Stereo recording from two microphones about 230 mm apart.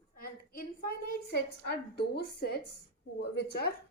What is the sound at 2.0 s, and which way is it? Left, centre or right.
A woman's voice, left.